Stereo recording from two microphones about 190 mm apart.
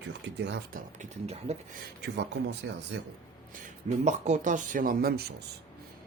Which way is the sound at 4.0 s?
40° right (ahead or behind).